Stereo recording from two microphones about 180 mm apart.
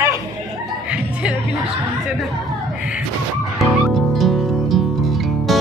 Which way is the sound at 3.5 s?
Centre (ahead or behind).